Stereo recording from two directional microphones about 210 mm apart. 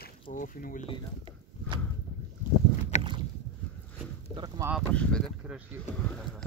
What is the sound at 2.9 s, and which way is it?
Rowboat, 30° left (ahead or behind).